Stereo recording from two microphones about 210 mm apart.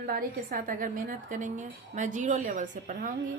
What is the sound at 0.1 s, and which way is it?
Speech, 45° right (ahead or behind).